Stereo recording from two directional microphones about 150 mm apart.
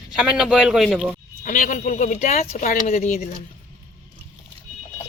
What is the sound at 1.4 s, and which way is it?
Speech, 60° left (ahead or behind).